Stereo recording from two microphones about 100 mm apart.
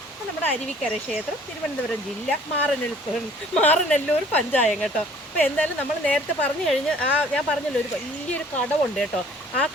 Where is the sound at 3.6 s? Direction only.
15° left (ahead or behind).